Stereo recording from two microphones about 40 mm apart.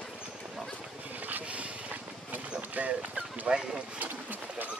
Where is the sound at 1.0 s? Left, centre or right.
Right.